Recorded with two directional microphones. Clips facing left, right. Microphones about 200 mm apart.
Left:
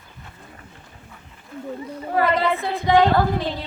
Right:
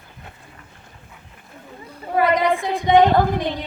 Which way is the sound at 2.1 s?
15° right (ahead or behind).